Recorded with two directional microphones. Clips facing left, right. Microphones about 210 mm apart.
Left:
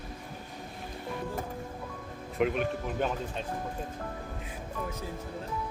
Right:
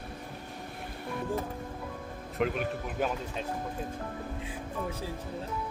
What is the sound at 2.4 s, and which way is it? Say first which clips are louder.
Speech: left 2 dB; centre (ahead or behind).